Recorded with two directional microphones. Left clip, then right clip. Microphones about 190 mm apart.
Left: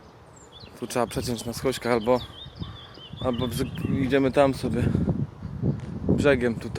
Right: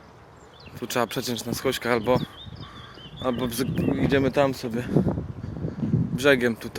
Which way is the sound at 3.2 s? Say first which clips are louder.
Right 1 dB; centre (ahead or behind).